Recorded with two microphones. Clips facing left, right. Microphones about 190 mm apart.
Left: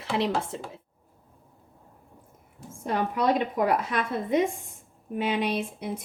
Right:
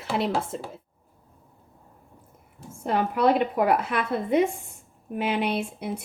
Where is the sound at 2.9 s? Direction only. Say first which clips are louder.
Right 3 dB; 60° right (ahead or behind).